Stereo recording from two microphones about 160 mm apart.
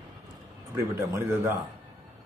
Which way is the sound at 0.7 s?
20° right (ahead or behind).